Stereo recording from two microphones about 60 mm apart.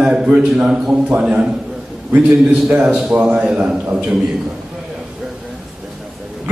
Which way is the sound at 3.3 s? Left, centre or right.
Centre.